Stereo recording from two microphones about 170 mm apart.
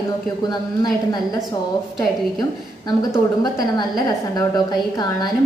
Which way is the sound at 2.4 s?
20° left (ahead or behind).